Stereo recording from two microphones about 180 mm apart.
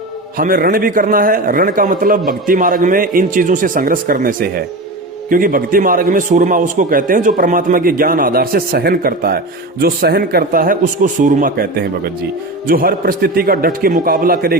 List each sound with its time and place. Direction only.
0.3 s a man's voice: 55° right (ahead or behind)